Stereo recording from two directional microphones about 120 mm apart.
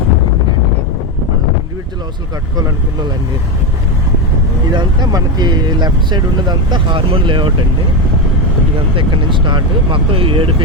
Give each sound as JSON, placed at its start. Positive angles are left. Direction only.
{"t": 4.7, "sound": "speech", "side_deg": -40}
{"t": 9.0, "sound": "speech", "side_deg": -40}